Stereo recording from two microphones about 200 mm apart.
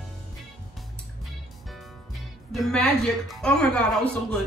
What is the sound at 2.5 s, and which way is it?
Speech, centre (ahead or behind).